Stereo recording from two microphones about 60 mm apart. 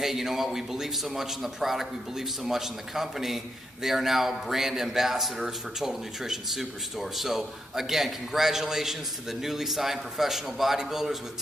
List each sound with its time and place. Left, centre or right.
0.0 s a man's voice: centre